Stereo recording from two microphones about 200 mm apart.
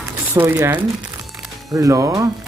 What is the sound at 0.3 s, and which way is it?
Speech, 10° right (ahead or behind).